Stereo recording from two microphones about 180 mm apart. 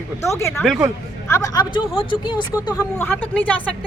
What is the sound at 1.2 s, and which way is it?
Speech, 15° left (ahead or behind).